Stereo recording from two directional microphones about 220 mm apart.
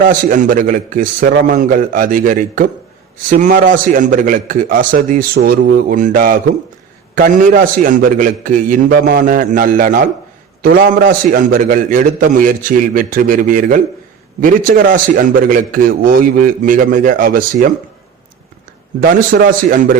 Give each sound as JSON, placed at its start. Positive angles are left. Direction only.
{"t": 0.0, "sound": "a man's voice", "side_deg": -35}
{"t": 18.9, "sound": "a man's voice", "side_deg": -40}